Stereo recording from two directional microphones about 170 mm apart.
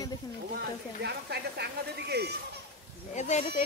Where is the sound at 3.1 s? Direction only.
45° left (ahead or behind).